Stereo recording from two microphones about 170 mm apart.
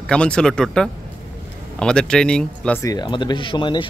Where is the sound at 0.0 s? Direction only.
5° left (ahead or behind).